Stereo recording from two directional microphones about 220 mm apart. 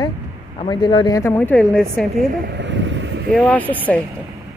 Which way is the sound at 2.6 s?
55° right (ahead or behind).